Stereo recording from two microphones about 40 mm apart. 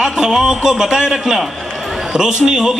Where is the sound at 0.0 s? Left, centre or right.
Centre.